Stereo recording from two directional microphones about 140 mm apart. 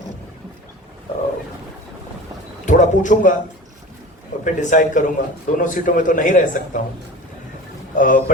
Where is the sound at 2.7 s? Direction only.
65° left (ahead or behind).